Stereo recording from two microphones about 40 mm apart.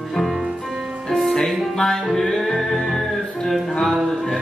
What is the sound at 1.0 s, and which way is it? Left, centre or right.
Music, centre.